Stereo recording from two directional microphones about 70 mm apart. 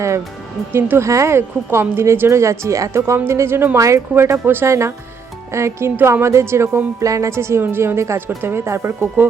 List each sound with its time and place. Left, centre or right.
0.7 s speech: right
3.8 s speech: right
4.1 s speech: right